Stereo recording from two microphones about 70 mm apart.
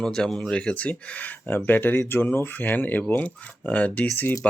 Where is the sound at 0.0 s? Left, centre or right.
Centre.